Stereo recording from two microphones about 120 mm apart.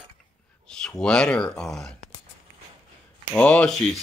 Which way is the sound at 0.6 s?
5° left (ahead or behind).